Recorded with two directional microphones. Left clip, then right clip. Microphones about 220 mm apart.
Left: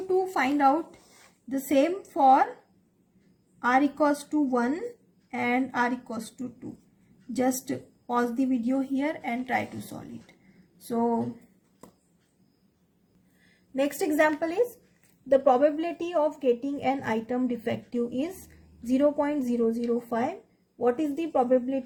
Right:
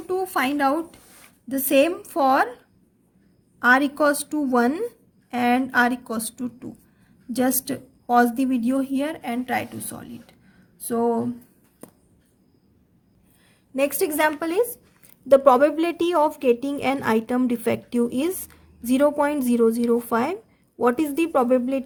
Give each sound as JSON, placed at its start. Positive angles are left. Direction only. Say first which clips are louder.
{"t": 0.3, "sound": "a woman's voice", "louder": "right 2 dB", "side_deg": -40}
{"t": 3.6, "sound": "a woman's voice", "louder": "right 5 dB", "side_deg": -45}
{"t": 7.3, "sound": "a woman's voice", "louder": "right 4 dB", "side_deg": -40}
{"t": 13.7, "sound": "a woman's voice", "louder": "right 3 dB", "side_deg": -30}